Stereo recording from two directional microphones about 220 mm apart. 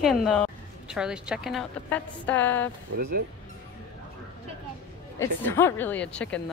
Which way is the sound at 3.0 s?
45° right (ahead or behind).